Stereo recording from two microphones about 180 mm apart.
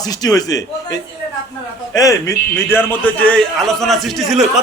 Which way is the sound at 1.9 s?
20° left (ahead or behind).